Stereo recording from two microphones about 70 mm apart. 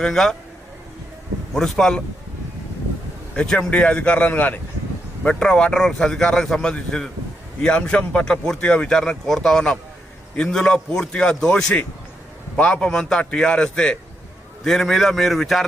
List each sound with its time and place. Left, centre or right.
0.0 s speech: centre
1.5 s speech: centre
3.3 s a man's voice: centre
5.2 s a man's voice: centre